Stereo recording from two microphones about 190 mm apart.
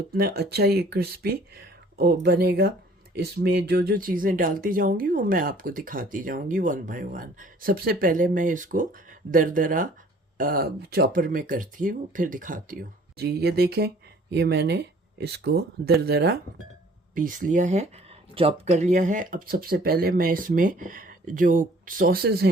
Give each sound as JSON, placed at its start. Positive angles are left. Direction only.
{"t": 0.1, "sound": "speech", "side_deg": -55}
{"t": 17.2, "sound": "speech", "side_deg": -45}